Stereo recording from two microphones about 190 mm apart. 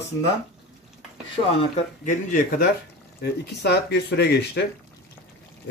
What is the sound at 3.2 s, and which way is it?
Speech, 60° left (ahead or behind).